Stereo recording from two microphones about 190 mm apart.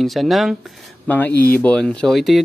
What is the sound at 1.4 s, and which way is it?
Speech, 50° left (ahead or behind).